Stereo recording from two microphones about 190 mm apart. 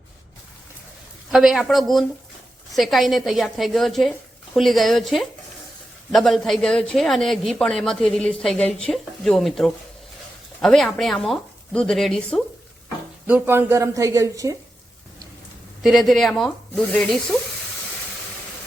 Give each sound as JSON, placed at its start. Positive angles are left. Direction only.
{"t": 1.3, "sound": "speech", "side_deg": 0}
{"t": 13.2, "sound": "speech", "side_deg": -10}
{"t": 15.8, "sound": "speech", "side_deg": 0}